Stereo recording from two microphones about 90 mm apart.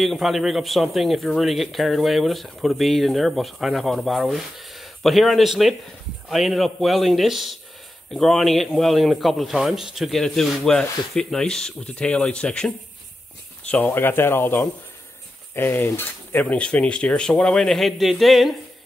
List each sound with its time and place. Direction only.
0.0 s a man's voice: centre (ahead or behind)